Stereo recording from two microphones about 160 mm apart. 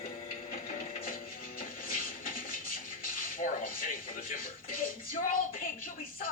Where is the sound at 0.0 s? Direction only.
60° left (ahead or behind).